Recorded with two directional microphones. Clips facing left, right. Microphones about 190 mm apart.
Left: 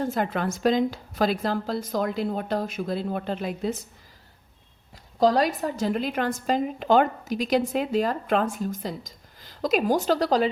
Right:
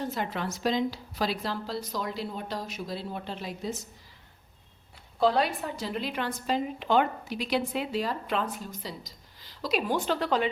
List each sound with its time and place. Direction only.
0.0 s a woman's voice: 50° left (ahead or behind)
5.2 s a woman's voice: 40° left (ahead or behind)